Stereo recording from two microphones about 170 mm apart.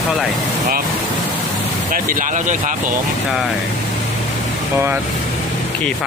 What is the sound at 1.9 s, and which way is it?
Speech, 50° right (ahead or behind).